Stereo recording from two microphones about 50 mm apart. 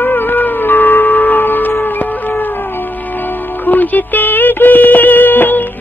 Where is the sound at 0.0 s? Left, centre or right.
Left.